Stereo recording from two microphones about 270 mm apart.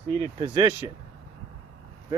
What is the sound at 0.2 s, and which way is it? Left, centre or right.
Speech, centre.